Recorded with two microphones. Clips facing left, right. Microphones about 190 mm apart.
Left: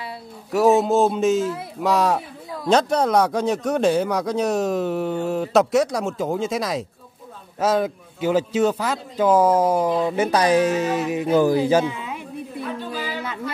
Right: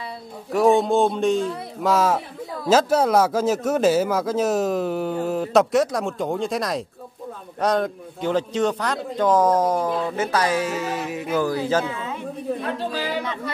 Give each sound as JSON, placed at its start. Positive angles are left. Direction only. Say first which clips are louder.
{"t": 0.5, "sound": "a man's voice", "louder": "left 1 dB", "side_deg": 5}
{"t": 12.6, "sound": "speech", "louder": "right 2 dB", "side_deg": -75}